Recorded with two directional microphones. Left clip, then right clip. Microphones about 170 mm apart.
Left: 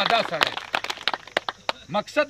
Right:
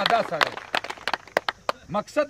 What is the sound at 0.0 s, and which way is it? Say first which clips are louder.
Speech: even; 10° right (ahead or behind).